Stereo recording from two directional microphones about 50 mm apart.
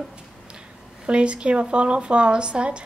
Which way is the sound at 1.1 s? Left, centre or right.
Right.